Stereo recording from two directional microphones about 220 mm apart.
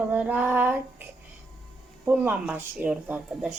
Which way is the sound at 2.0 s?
10° right (ahead or behind).